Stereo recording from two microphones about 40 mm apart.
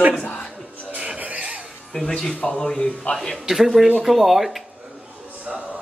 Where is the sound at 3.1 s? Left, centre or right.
Left.